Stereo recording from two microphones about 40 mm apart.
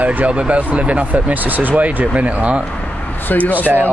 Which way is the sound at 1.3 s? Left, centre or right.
Right.